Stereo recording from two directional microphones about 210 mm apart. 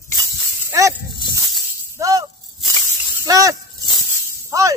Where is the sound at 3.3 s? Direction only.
15° right (ahead or behind).